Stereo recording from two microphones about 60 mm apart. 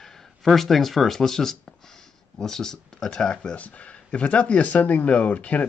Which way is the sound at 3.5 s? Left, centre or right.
Left.